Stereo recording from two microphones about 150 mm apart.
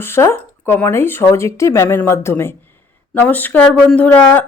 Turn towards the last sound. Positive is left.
turn(degrees=15)  # may be behind; listen again after turning